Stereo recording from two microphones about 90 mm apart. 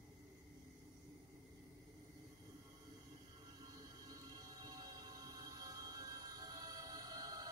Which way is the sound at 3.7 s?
45° right (ahead or behind).